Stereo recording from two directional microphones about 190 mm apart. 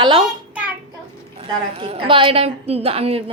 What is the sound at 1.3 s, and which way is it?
A woman's voice, 30° right (ahead or behind).